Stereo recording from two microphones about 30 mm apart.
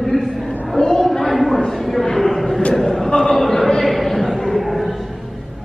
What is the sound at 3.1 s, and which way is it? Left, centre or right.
Speech, left.